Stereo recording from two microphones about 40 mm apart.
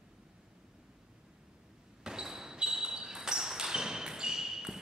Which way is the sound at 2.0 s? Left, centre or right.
Centre.